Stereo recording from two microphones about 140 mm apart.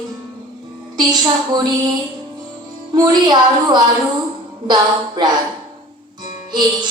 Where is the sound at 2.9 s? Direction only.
30° right (ahead or behind).